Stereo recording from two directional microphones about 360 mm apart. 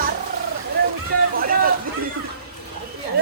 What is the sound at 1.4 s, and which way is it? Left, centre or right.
Speech, right.